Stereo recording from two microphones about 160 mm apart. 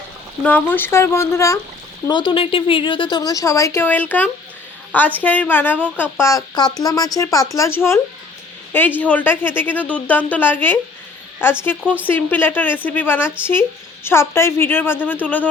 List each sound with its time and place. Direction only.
0.4 s speech: 10° left (ahead or behind)
2.0 s speech: 30° left (ahead or behind); by 15.4 s 10° left (ahead or behind)